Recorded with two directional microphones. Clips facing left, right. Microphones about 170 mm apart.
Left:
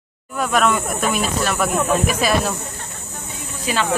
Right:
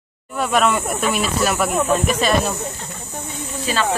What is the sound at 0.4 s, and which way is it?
Speech, centre (ahead or behind).